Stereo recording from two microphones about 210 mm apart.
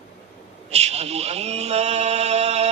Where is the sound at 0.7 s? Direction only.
30° right (ahead or behind).